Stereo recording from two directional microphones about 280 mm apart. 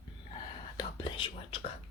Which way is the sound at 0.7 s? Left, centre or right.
Centre.